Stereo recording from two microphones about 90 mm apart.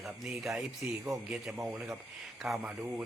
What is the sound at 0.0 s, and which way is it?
A man's voice, 5° right (ahead or behind).